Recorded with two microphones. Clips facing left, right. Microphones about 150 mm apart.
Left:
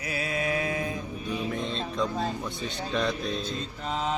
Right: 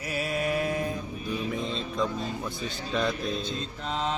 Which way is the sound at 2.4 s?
Centre (ahead or behind).